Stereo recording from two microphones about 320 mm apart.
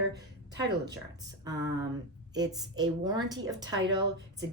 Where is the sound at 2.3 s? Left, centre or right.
Centre.